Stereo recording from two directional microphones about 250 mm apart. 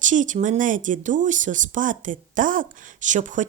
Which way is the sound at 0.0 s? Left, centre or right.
Right.